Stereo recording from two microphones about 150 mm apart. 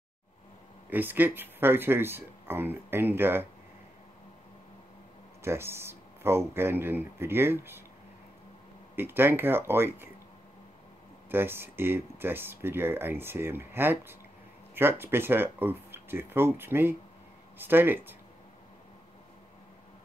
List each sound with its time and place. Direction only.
0.8 s speech: 10° right (ahead or behind)
5.4 s speech: 15° right (ahead or behind)
8.9 s speech: 15° right (ahead or behind)
11.2 s speech: 15° right (ahead or behind)